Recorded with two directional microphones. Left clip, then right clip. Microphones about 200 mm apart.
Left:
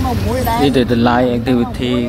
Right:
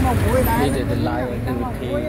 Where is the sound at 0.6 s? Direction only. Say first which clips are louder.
Left 8 dB; 35° left (ahead or behind).